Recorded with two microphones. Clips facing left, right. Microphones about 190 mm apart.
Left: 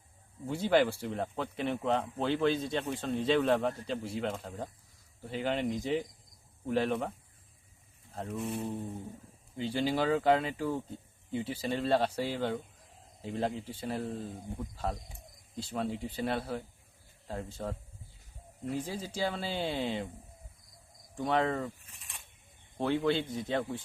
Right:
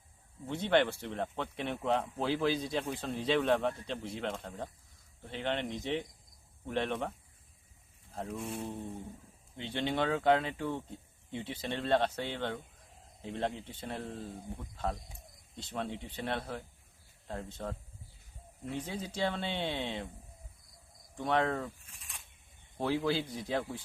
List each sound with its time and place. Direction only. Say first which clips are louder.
0.4 s speech: left 2 dB; 5° left (ahead or behind)
8.1 s speech: left 3 dB; centre (ahead or behind)
21.2 s speech: left 1 dB; centre (ahead or behind)